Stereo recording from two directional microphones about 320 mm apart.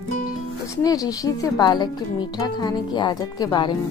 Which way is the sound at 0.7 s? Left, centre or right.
Centre.